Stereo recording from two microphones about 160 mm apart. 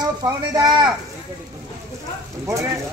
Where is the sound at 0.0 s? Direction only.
25° right (ahead or behind).